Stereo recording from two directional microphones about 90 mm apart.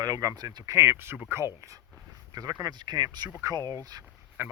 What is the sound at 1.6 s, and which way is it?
Speech, 40° right (ahead or behind).